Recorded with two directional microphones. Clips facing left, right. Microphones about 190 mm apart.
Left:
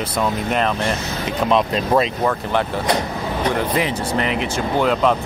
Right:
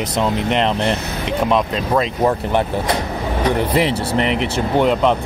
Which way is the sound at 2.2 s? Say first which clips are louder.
Right 3 dB; 20° right (ahead or behind).